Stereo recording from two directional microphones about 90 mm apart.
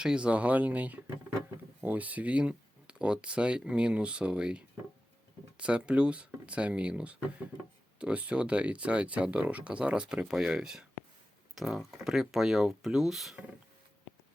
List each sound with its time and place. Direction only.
0.0 s speech: 10° right (ahead or behind)